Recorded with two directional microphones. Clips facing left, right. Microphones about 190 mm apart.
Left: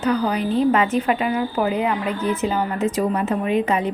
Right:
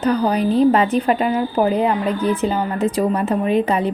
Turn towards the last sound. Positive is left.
turn(degrees=-35)  # may be behind; listen again after turning